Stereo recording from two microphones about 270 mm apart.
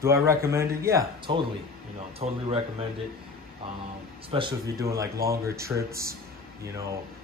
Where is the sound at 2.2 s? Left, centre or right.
Right.